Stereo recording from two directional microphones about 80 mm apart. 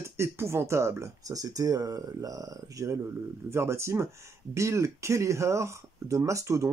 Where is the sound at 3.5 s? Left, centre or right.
Right.